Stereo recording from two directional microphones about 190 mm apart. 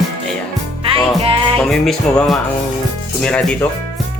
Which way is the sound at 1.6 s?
5° left (ahead or behind).